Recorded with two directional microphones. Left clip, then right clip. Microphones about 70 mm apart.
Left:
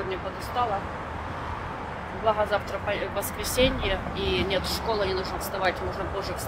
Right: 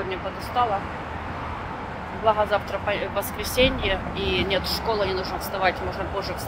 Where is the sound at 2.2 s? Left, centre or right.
Left.